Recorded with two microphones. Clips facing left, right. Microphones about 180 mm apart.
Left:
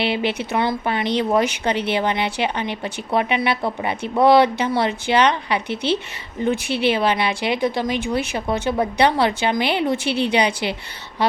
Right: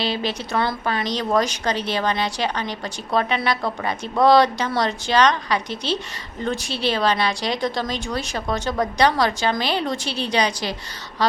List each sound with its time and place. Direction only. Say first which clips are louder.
0.0 s a woman's voice: left 3 dB; 20° left (ahead or behind)
5.6 s a woman's voice: left 4 dB; 60° left (ahead or behind)
6.9 s a woman's voice: left 1 dB; 15° left (ahead or behind)
10.0 s a woman's voice: left 6 dB; 60° left (ahead or behind)